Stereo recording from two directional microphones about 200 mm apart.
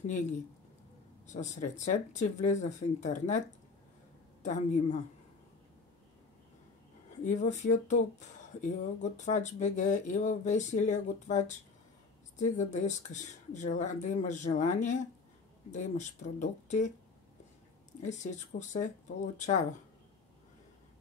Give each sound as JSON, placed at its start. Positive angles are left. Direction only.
{"t": 0.0, "sound": "speech", "side_deg": 35}
{"t": 7.2, "sound": "speech", "side_deg": 35}
{"t": 18.0, "sound": "speech", "side_deg": 35}